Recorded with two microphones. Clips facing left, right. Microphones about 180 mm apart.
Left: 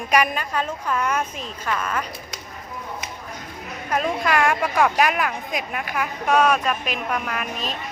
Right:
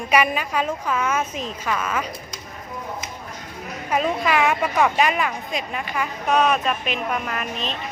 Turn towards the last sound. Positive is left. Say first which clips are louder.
# even
turn(degrees=5)  # may be behind; listen again after turning